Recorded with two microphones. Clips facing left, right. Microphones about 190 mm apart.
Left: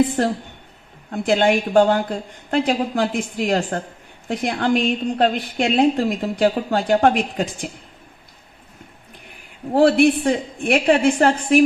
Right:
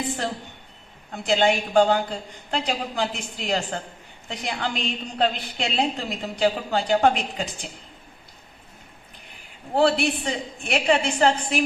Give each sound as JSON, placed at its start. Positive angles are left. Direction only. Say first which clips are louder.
{"t": 1.1, "sound": "a woman's voice", "louder": "left 4 dB", "side_deg": 55}
{"t": 9.7, "sound": "a woman's voice", "louder": "left 7 dB", "side_deg": 55}